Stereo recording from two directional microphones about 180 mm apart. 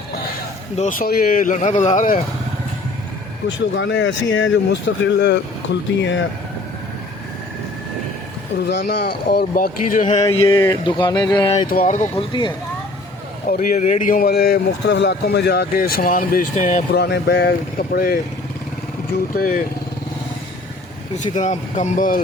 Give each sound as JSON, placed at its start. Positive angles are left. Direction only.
{"t": 0.8, "sound": "speech", "side_deg": 50}
{"t": 3.8, "sound": "speech", "side_deg": 90}
{"t": 8.5, "sound": "speech", "side_deg": 65}
{"t": 10.2, "sound": "a sound", "side_deg": 20}
{"t": 11.7, "sound": "speech", "side_deg": 50}
{"t": 12.1, "sound": "a sound", "side_deg": 25}
{"t": 13.5, "sound": "speech", "side_deg": 50}
{"t": 16.9, "sound": "speech", "side_deg": 65}
{"t": 19.3, "sound": "speech", "side_deg": 50}
{"t": 21.2, "sound": "speech", "side_deg": 40}